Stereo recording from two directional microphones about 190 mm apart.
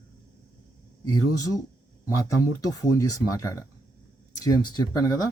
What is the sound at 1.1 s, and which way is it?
Speech, 20° left (ahead or behind).